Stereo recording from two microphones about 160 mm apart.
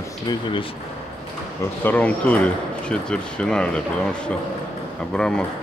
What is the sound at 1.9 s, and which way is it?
Speech, 10° left (ahead or behind).